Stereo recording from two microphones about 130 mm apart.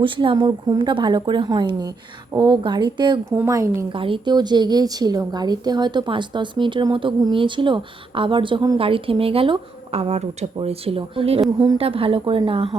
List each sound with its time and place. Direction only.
0.0 s a woman's voice: 40° right (ahead or behind)
3.3 s speech: 20° right (ahead or behind)
3.9 s a woman's voice: 40° right (ahead or behind)
8.8 s speech: 45° right (ahead or behind)